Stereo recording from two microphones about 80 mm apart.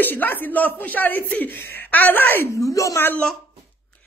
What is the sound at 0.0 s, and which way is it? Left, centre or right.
Speech, left.